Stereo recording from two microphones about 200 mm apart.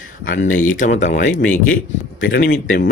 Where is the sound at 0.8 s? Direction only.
35° left (ahead or behind).